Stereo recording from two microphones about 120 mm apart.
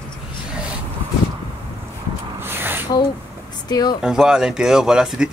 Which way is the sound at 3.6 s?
35° left (ahead or behind).